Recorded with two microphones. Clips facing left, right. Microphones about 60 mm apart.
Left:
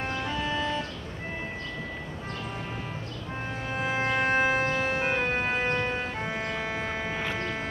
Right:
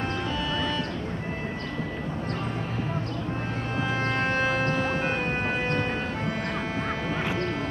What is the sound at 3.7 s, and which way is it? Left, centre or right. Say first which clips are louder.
Music: left 1 dB; centre.